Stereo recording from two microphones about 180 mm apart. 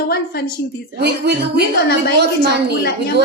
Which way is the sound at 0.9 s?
65° right (ahead or behind).